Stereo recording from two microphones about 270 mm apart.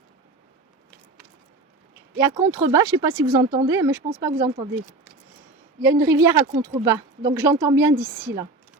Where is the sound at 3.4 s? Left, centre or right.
Right.